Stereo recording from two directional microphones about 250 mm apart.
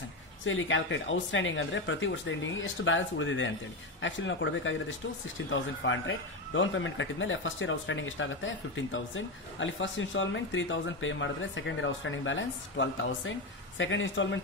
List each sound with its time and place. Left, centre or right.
0.5 s a man's voice: left